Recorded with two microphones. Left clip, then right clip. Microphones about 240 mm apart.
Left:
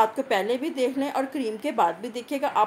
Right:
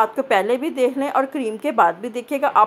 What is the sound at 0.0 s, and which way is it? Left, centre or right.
A woman's voice, centre.